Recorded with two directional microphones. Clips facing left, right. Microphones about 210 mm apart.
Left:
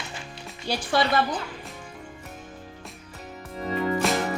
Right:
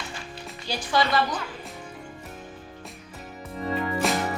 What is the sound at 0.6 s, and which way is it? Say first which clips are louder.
Speech: left 1 dB; 60° left (ahead or behind).